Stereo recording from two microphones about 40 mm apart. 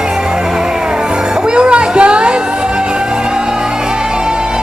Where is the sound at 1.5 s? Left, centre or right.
Right.